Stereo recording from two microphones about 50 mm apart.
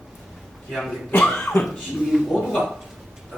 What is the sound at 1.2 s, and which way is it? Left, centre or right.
Cough, left.